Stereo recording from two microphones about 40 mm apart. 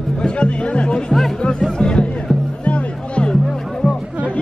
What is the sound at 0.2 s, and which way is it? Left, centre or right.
Speech, left.